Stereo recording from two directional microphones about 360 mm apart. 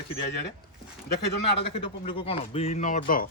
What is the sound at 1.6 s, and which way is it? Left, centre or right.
Speech, centre.